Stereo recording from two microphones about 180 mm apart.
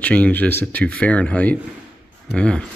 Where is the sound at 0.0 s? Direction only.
10° left (ahead or behind).